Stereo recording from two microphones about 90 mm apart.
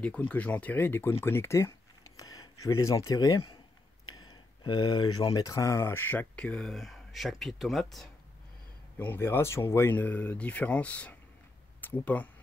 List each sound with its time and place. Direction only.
0.0 s speech: 15° left (ahead or behind); by 1.7 s 30° left (ahead or behind)
2.1 s speech: 45° left (ahead or behind)
4.3 s speech: 60° left (ahead or behind); by 6.2 s 25° left (ahead or behind)
6.3 s speech: 10° left (ahead or behind)
8.9 s speech: 25° left (ahead or behind)
9.9 s speech: 20° left (ahead or behind)